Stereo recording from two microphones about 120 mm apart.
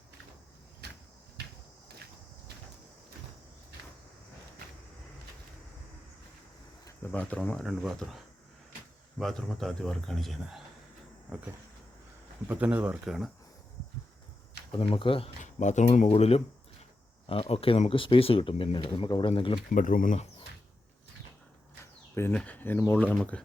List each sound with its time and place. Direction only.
6.8 s speech: 15° left (ahead or behind)
7.6 s a man's voice: centre (ahead or behind)
12.5 s speech: 10° right (ahead or behind)
14.8 s speech: 50° left (ahead or behind)
15.5 s speech: 85° left
16.0 s speech: 60° left (ahead or behind)
19.7 s speech: 90° left
22.1 s speech: 20° left (ahead or behind)